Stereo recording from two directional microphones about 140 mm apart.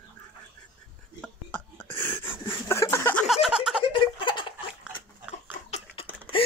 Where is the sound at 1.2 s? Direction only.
10° left (ahead or behind).